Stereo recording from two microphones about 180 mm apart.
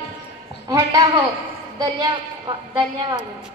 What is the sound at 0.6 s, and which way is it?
Speech, 20° right (ahead or behind).